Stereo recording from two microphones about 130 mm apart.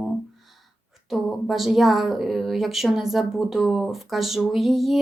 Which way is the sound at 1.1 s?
Centre (ahead or behind).